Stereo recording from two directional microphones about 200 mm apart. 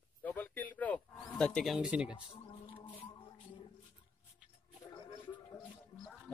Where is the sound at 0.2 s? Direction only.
10° left (ahead or behind).